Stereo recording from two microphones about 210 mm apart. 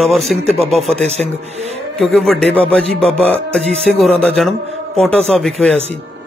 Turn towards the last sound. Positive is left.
turn(degrees=0)  # may be behind; listen again after turning